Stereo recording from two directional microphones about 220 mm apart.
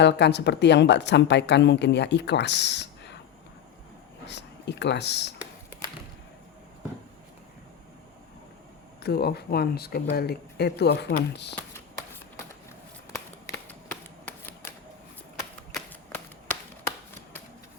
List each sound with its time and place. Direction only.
0.0 s a woman's voice: 50° left (ahead or behind)
4.3 s speech: 50° left (ahead or behind)
9.0 s a woman's voice: 45° left (ahead or behind)
14.3 s typewriter: 10° left (ahead or behind)
15.7 s a sound: 5° left (ahead or behind)